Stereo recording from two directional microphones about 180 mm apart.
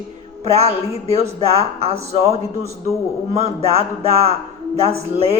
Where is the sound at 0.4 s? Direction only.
35° right (ahead or behind).